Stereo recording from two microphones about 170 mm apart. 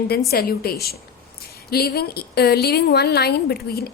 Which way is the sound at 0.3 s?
65° left (ahead or behind).